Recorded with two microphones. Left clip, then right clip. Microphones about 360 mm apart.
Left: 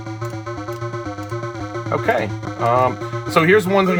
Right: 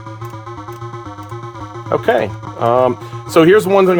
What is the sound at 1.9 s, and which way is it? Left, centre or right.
Speech, right.